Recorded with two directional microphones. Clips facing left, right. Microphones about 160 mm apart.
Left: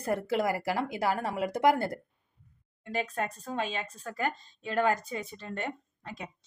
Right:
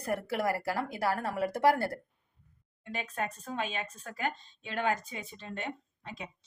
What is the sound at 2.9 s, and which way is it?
A woman's voice, 40° left (ahead or behind).